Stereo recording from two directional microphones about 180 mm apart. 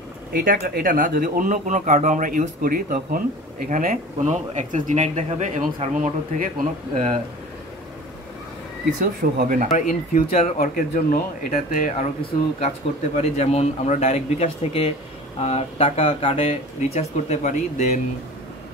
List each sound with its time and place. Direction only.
0.3 s speech: 55° right (ahead or behind)
9.0 s speech: 50° right (ahead or behind)
9.7 s speech: 40° left (ahead or behind)
12.2 s speech: 35° left (ahead or behind)